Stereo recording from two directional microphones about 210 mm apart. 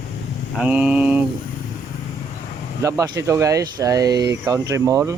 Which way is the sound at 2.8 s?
15° right (ahead or behind).